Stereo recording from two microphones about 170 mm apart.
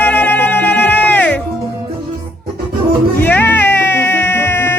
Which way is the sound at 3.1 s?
10° left (ahead or behind).